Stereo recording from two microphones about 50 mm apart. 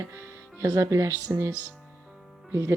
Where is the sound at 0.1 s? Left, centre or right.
Right.